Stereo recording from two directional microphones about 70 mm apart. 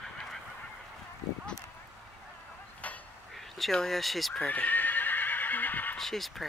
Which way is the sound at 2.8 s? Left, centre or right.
Left.